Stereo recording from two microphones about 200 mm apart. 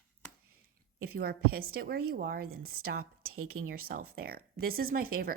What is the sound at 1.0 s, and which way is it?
Speech, 50° right (ahead or behind).